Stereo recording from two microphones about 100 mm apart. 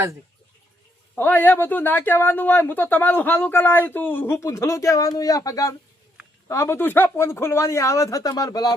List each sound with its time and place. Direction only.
1.1 s speech: 20° left (ahead or behind); by 8.7 s 40° left (ahead or behind)